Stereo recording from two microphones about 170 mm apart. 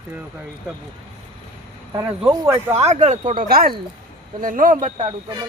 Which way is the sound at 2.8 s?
40° right (ahead or behind).